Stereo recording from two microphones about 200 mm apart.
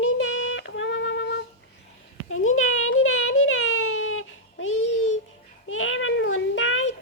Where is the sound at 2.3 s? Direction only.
90° left.